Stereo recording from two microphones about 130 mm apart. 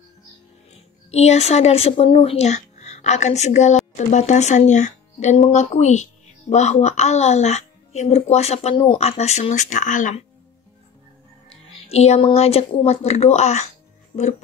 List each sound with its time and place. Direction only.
1.1 s speech: 55° left (ahead or behind)
8.7 s speech: 35° left (ahead or behind)
9.0 s speech: 55° left (ahead or behind); by 10.2 s 75° left (ahead or behind)
11.9 s speech: 55° left (ahead or behind)